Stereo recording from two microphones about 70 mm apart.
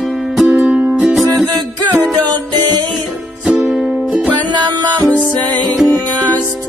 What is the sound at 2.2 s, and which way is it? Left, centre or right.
Music, right.